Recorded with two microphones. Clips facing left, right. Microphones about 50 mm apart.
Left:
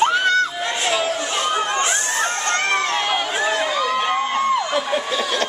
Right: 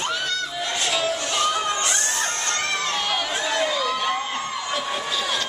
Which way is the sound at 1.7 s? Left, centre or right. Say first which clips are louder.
Left 4 dB; left.